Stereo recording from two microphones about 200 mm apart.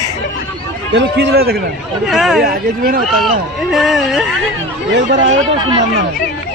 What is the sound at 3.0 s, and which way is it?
Speech, centre (ahead or behind).